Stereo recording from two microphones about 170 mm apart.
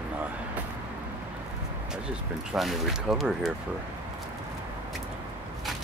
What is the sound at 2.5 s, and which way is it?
Speech, centre (ahead or behind).